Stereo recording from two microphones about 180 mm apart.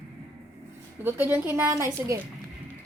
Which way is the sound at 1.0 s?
10° right (ahead or behind).